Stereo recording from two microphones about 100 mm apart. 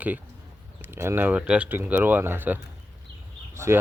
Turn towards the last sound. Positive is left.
turn(degrees=-25)  # may be behind; listen again after turning